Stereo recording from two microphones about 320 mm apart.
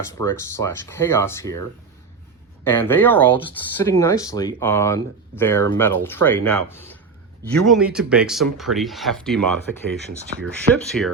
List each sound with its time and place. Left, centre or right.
0.2 s speech: centre
2.6 s speech: centre
10.7 s speech: centre